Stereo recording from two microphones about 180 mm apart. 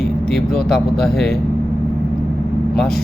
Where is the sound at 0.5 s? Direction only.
5° left (ahead or behind).